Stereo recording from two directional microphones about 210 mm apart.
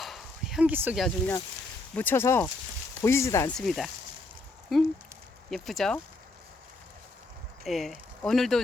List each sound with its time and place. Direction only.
0.0 s bow-wow: centre (ahead or behind)
2.0 s speech: 10° left (ahead or behind)
3.6 s speech: centre (ahead or behind)
7.6 s speech: centre (ahead or behind)